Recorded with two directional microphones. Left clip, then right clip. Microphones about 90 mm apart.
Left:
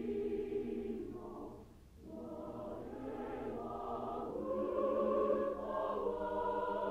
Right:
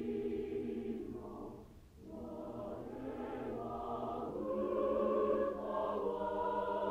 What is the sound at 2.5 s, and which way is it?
Choir, 25° right (ahead or behind).